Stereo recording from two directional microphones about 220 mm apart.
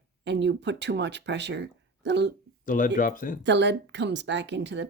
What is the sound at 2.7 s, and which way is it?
Speech, 35° left (ahead or behind).